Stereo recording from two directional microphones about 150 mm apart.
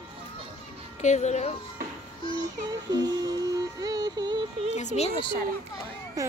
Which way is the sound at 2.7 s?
25° right (ahead or behind).